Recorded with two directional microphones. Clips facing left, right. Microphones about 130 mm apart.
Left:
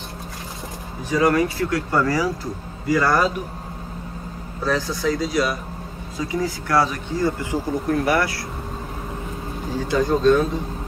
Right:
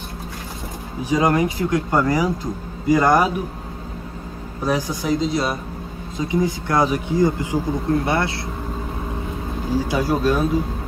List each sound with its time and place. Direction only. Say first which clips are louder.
1.0 s speech: even; 15° right (ahead or behind)
4.6 s speech: right 1 dB; 15° right (ahead or behind)
9.8 s speech: left 1 dB; 10° right (ahead or behind)